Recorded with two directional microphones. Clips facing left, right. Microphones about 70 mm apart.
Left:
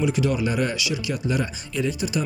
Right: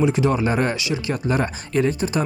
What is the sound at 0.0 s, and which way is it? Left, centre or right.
Speech, right.